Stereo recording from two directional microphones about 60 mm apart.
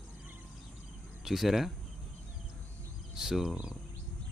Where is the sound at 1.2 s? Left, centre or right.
Centre.